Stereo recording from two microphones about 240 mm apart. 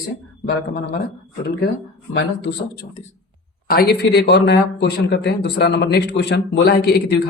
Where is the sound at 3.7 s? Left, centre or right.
Left.